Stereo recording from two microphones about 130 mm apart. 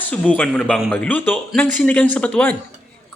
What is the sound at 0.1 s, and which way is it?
A man's voice, 10° left (ahead or behind).